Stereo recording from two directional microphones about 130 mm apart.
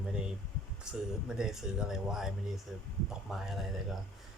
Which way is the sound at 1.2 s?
5° right (ahead or behind).